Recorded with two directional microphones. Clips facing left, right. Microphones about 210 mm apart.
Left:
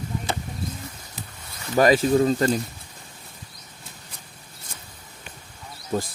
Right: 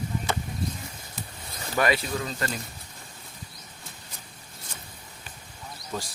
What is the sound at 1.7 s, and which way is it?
Speech, 40° left (ahead or behind).